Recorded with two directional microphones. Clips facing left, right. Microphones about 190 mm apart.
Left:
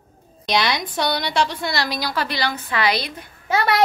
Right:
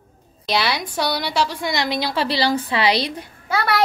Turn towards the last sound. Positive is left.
turn(degrees=20)  # may be behind; listen again after turning